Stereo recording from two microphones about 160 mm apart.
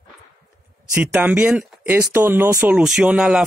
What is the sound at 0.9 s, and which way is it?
Speech, 10° right (ahead or behind).